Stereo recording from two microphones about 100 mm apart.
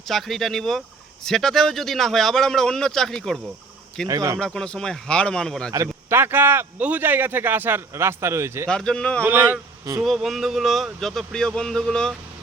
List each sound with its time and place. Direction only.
0.1 s speech: 5° left (ahead or behind)
4.1 s speech: 35° right (ahead or behind)
4.4 s speech: 5° left (ahead or behind)
5.7 s a man's voice: 30° right (ahead or behind)
8.7 s speech: 10° left (ahead or behind)
9.2 s a man's voice: 20° right (ahead or behind)
10.0 s speech: centre (ahead or behind)